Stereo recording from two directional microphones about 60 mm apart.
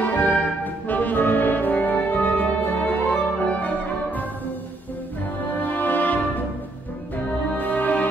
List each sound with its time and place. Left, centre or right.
0.0 s music: left
0.8 s brass instrument: left
5.5 s music: left
7.5 s music: left